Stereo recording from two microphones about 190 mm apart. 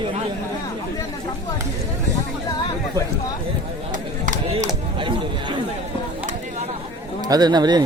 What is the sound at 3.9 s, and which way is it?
Chop, 45° right (ahead or behind).